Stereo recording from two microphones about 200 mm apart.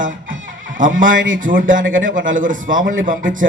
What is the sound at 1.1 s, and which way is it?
Speech, 75° right (ahead or behind).